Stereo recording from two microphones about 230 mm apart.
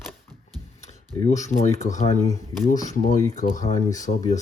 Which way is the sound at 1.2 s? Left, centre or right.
Left.